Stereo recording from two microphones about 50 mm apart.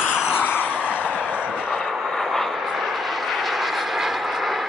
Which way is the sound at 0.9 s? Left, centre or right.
Right.